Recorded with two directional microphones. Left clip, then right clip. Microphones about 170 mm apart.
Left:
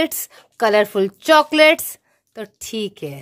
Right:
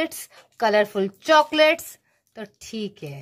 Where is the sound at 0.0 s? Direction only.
30° left (ahead or behind).